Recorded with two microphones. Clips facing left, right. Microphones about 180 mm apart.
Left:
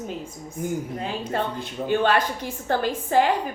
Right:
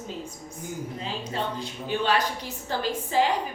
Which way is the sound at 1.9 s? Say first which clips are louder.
Left 4 dB; 55° left (ahead or behind).